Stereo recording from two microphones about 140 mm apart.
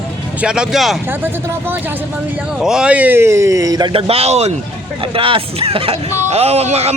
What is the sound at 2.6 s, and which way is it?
A man's voice, 5° right (ahead or behind).